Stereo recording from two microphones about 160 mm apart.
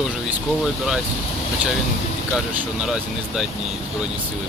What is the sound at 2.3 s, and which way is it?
Speech, 5° right (ahead or behind).